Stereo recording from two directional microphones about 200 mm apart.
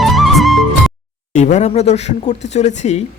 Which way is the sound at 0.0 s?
Centre (ahead or behind).